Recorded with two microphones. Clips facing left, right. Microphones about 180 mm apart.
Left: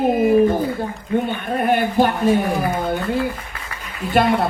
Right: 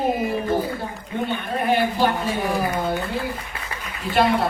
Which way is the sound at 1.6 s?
50° left (ahead or behind).